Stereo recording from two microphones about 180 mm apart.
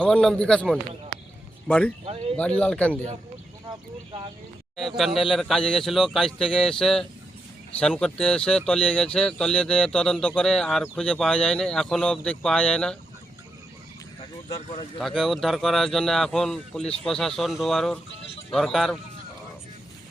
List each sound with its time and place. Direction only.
0.0 s speech: 5° left (ahead or behind)
3.7 s speech: 25° right (ahead or behind)
4.9 s speech: centre (ahead or behind)
14.5 s speech: 30° left (ahead or behind)
14.9 s speech: centre (ahead or behind)